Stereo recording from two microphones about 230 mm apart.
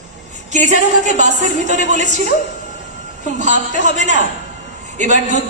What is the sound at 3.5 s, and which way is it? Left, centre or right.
A man's voice, right.